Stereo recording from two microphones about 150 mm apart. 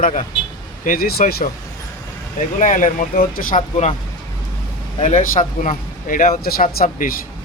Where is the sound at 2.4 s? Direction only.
60° left (ahead or behind).